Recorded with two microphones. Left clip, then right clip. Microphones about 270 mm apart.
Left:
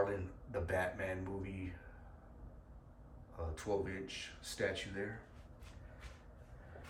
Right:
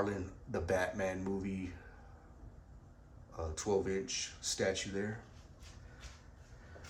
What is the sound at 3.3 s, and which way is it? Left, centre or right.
Speech, centre.